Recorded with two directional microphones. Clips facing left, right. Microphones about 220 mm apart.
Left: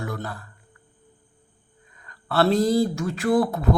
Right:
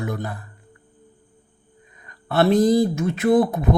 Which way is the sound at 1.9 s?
20° right (ahead or behind).